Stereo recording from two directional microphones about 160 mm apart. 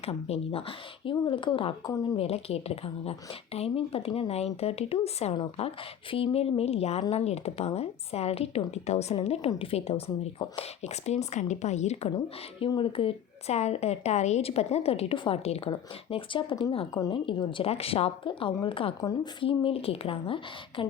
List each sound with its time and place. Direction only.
0.0 s a woman's voice: 40° left (ahead or behind)
1.1 s a woman's voice: 30° left (ahead or behind); by 12.1 s 45° left (ahead or behind)
12.1 s a woman's voice: 30° left (ahead or behind)